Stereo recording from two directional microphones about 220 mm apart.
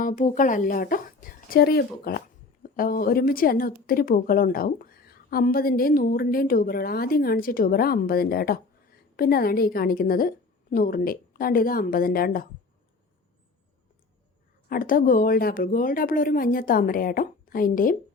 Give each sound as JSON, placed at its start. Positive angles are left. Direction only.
{"t": 0.0, "sound": "a woman's voice", "side_deg": 35}
{"t": 14.7, "sound": "a woman's voice", "side_deg": 40}